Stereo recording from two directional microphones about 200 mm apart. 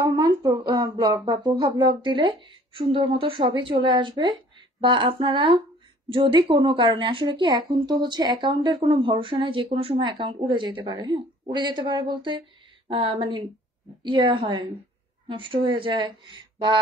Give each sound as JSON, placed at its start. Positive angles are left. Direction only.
{"t": 0.0, "sound": "speech", "side_deg": -20}